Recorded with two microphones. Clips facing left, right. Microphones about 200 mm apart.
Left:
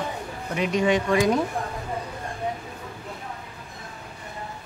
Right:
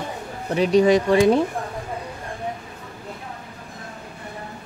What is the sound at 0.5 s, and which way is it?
Speech, 35° right (ahead or behind).